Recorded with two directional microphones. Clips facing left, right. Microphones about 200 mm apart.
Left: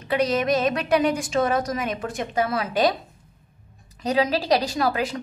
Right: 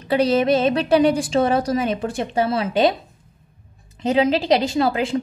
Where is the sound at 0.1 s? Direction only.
30° right (ahead or behind).